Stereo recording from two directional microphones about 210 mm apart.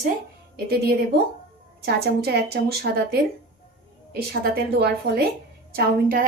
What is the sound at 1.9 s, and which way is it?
A woman's voice, 50° right (ahead or behind).